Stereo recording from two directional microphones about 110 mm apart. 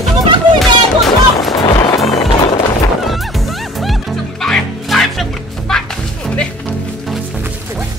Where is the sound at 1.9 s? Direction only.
65° left (ahead or behind).